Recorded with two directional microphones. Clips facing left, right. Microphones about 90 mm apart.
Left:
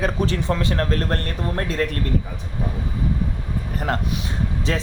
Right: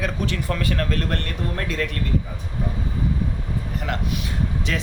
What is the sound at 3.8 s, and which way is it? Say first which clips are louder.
Speech: left 5 dB; 40° left (ahead or behind).